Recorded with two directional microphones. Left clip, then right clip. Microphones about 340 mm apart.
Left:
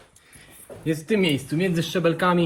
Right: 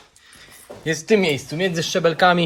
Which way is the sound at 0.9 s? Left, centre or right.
Centre.